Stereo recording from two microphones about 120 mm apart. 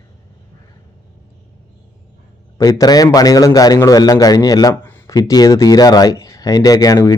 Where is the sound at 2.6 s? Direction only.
30° left (ahead or behind).